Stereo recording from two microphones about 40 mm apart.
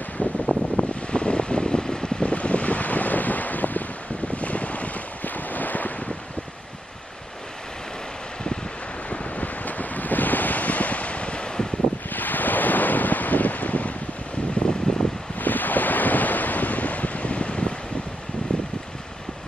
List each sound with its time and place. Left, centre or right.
0.2 s wind noise: left; by 2.2 s centre
2.2 s wind noise: left
9.1 s wind: left
12.1 s wind noise: left
14.6 s a sound: left
15.3 s wind noise: left
18.5 s a sound: left